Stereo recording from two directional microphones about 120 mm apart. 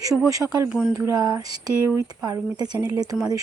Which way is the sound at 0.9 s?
25° right (ahead or behind).